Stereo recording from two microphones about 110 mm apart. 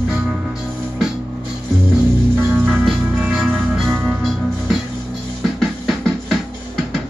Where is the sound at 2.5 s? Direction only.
15° right (ahead or behind).